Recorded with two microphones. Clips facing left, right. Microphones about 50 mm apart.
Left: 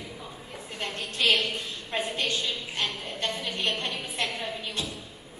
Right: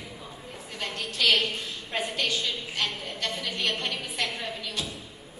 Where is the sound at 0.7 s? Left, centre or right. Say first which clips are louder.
Even; left.